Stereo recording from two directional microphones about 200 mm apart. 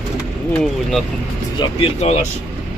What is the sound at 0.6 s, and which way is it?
Speech, centre (ahead or behind).